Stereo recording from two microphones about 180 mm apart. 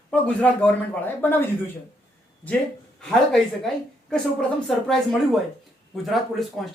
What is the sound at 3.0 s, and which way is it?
A woman's voice, 5° left (ahead or behind).